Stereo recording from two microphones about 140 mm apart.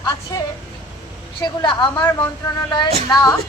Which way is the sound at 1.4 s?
30° left (ahead or behind).